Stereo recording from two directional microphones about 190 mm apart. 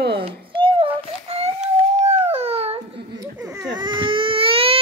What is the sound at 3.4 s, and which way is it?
Baby cry, 20° right (ahead or behind).